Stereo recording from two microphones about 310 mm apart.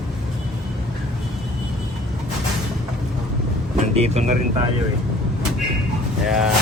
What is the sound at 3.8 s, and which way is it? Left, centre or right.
Speech, right.